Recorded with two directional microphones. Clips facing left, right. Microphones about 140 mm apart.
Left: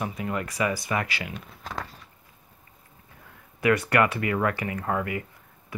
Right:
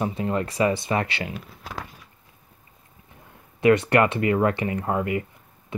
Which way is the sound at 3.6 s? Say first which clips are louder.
Right 4 dB; 25° right (ahead or behind).